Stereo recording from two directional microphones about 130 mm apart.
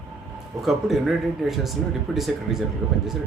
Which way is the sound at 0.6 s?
Centre (ahead or behind).